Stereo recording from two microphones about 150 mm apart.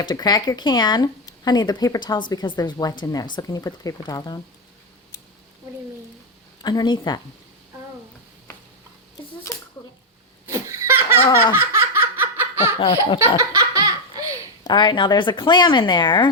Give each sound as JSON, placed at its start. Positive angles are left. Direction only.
{"t": 0.0, "sound": "speech", "side_deg": 30}
{"t": 6.6, "sound": "speech", "side_deg": 25}
{"t": 10.5, "sound": "laughter", "side_deg": -20}
{"t": 12.8, "sound": "speech", "side_deg": 35}
{"t": 13.5, "sound": "laughter", "side_deg": -20}
{"t": 14.6, "sound": "speech", "side_deg": 30}